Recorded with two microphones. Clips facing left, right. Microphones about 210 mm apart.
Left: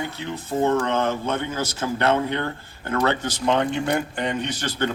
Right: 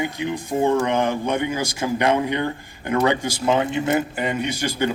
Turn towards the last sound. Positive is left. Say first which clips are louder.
# right 3 dB
turn(degrees=-10)  # may be behind; listen again after turning